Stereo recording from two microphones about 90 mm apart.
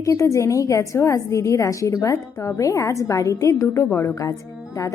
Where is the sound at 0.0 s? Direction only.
35° left (ahead or behind).